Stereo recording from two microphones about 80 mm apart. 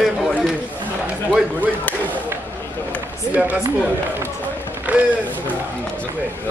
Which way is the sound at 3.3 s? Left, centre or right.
Centre.